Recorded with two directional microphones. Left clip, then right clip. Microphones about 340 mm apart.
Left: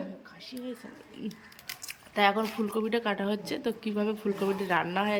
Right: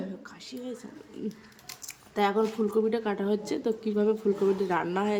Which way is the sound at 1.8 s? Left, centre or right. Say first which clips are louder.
Left 2 dB; centre.